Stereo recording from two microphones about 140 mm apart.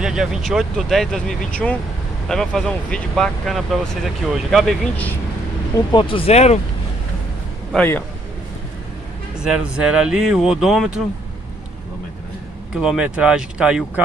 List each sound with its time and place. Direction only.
0.0 s speech: 5° right (ahead or behind)
5.9 s speech: 40° left (ahead or behind)
7.7 s a man's voice: 15° left (ahead or behind)
9.4 s speech: 5° right (ahead or behind)
12.7 s speech: 5° right (ahead or behind)